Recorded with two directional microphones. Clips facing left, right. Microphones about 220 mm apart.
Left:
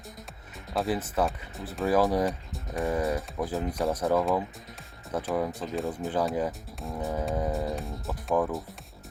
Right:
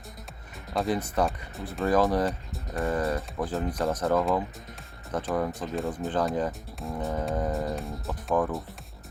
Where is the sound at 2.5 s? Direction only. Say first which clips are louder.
Even; centre (ahead or behind).